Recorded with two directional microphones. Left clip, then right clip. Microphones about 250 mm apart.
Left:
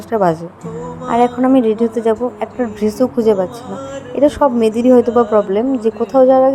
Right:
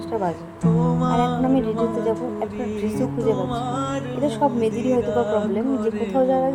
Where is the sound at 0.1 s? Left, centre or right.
Left.